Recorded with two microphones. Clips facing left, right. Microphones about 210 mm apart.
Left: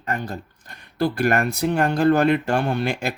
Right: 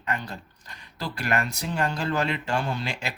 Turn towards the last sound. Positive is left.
turn(degrees=55)  # may be behind; listen again after turning